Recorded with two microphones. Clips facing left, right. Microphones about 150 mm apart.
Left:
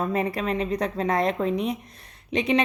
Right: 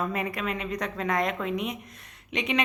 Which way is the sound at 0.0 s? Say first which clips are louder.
Left 4 dB; 30° left (ahead or behind).